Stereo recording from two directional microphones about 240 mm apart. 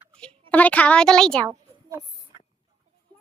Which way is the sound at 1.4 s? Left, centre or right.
Centre.